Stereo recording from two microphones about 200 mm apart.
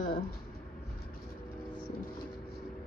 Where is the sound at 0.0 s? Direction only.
40° left (ahead or behind).